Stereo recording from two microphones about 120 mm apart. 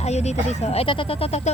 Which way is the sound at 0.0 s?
65° left (ahead or behind).